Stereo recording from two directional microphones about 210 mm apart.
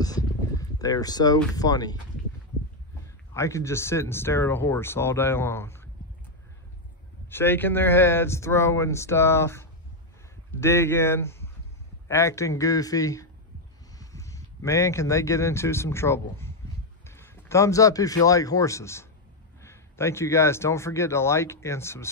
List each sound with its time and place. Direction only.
0.0 s a sound: 15° left (ahead or behind)
1.5 s a man's voice: 15° left (ahead or behind)
3.3 s a man's voice: 15° left (ahead or behind)
7.2 s a man's voice: 10° left (ahead or behind)